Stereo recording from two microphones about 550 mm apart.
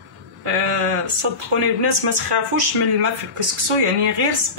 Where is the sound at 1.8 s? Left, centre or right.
Right.